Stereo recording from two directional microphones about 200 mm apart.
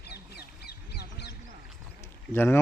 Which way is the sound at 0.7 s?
55° left (ahead or behind).